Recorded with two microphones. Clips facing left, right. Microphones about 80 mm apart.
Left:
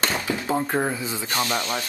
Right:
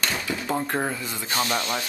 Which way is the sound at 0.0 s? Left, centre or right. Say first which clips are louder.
Left 3 dB; left.